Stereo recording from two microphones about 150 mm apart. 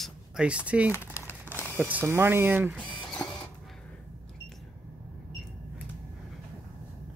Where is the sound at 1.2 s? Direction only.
10° right (ahead or behind).